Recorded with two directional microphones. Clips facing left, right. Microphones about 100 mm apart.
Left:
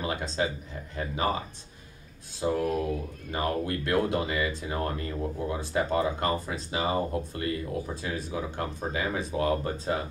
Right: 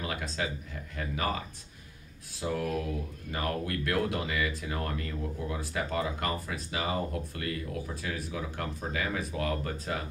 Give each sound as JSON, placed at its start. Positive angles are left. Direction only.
{"t": 0.0, "sound": "speech", "side_deg": 25}
{"t": 2.4, "sound": "speech", "side_deg": 25}